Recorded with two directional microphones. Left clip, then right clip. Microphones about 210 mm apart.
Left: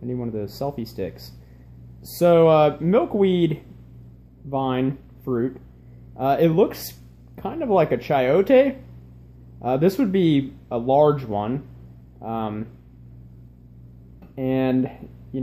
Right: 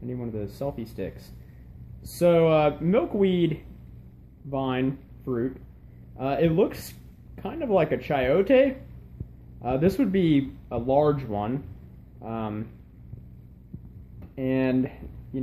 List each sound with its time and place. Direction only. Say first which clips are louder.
0.0 s speech: left 5 dB; 20° left (ahead or behind)
14.3 s speech: left 3 dB; 15° left (ahead or behind)